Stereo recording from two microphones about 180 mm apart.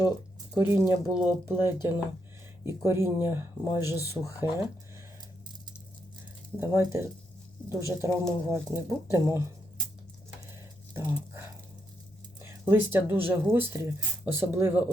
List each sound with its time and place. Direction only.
0.5 s speech: 15° right (ahead or behind)
6.6 s speech: 15° right (ahead or behind)
10.9 s dog: 10° right (ahead or behind)
12.4 s speech: 15° right (ahead or behind)